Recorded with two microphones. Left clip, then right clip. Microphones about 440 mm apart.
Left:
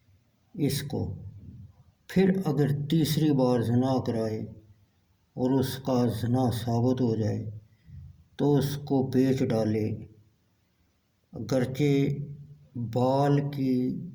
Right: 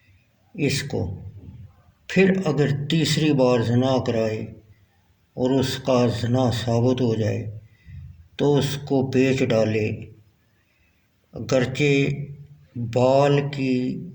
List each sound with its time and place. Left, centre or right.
0.5 s speech: left
2.0 s speech: left
11.3 s speech: left